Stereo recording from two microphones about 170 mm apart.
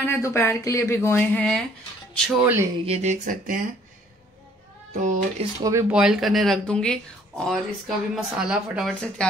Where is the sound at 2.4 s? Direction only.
10° right (ahead or behind).